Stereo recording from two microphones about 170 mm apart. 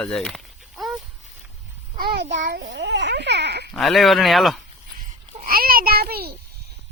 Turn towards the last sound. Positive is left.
turn(degrees=-65)  # may be behind; listen again after turning